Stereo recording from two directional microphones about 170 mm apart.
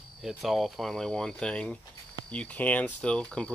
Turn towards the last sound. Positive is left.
turn(degrees=5)  # may be behind; listen again after turning